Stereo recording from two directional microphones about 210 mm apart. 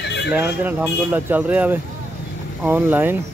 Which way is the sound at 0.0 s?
55° left (ahead or behind).